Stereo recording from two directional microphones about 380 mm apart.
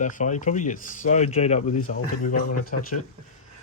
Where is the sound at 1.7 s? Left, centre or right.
Left.